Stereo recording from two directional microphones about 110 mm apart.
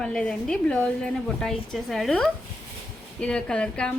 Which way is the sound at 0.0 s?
5° left (ahead or behind).